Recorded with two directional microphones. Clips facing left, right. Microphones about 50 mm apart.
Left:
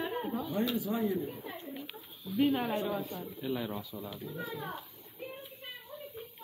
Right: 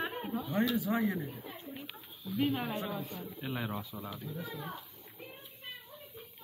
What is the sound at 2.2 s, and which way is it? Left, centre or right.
Speech, centre.